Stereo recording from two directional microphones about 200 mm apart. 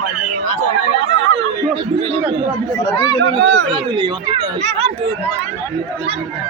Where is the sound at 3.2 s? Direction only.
60° right (ahead or behind).